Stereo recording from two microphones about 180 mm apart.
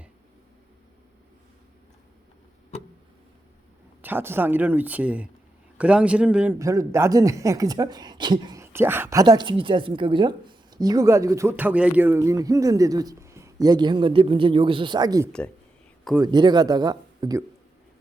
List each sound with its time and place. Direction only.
4.0 s speech: 10° right (ahead or behind)
6.6 s speech: 15° right (ahead or behind)